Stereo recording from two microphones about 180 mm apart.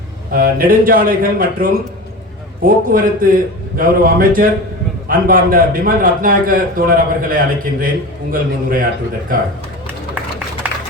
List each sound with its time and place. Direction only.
0.3 s a man's voice: 50° right (ahead or behind)